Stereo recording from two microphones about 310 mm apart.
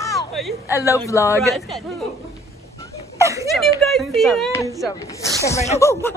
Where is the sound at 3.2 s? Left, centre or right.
Centre.